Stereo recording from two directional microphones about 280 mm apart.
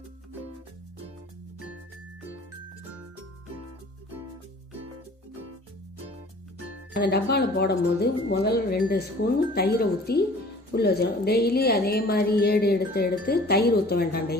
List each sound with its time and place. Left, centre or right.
6.9 s a woman's voice: left